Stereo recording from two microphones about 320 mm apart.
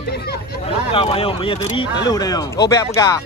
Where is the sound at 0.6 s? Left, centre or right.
Centre.